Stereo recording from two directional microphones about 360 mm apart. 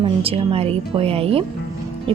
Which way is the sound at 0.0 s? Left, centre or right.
Centre.